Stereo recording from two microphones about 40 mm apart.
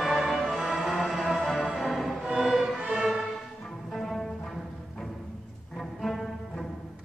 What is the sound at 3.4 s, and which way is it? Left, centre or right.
Music, centre.